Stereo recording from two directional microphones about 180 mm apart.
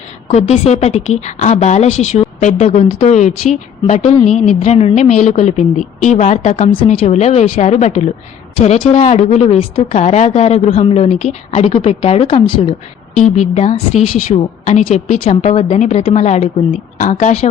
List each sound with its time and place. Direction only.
0.3 s a woman's voice: 40° left (ahead or behind)